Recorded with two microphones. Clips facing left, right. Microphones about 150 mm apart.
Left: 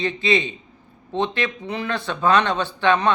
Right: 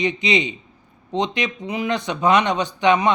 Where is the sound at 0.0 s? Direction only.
15° right (ahead or behind).